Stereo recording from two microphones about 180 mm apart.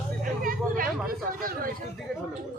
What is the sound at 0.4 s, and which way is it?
Hubbub, 50° right (ahead or behind).